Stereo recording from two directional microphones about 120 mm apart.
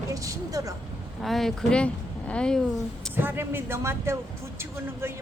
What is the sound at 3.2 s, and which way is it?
Speech, 15° right (ahead or behind).